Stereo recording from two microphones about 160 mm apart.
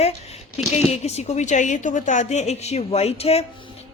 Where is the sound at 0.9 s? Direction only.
40° left (ahead or behind).